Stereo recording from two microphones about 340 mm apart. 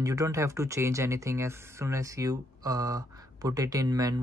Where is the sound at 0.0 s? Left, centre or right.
Centre.